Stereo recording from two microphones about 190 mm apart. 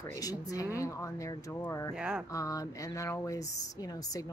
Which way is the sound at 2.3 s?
15° left (ahead or behind).